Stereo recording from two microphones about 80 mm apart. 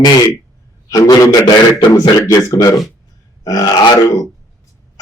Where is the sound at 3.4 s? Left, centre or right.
Left.